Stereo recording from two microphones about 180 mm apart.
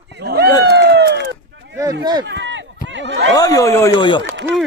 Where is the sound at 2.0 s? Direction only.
25° right (ahead or behind).